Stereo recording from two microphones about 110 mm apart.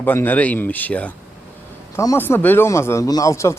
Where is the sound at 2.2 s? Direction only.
20° left (ahead or behind).